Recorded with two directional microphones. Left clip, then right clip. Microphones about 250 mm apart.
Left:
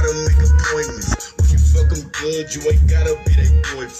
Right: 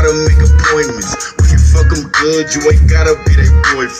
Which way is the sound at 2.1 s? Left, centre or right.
Centre.